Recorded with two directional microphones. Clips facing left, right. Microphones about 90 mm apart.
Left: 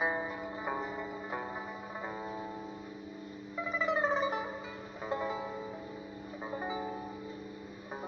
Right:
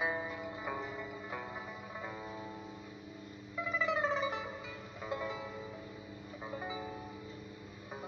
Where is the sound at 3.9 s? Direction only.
35° left (ahead or behind).